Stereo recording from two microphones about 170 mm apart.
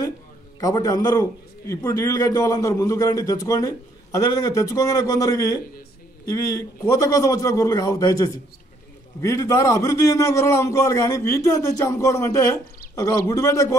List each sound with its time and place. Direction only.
0.6 s a man's voice: 20° left (ahead or behind)
6.3 s a man's voice: 20° left (ahead or behind)